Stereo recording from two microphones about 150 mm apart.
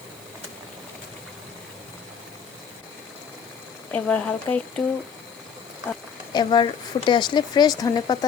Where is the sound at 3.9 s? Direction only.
10° left (ahead or behind).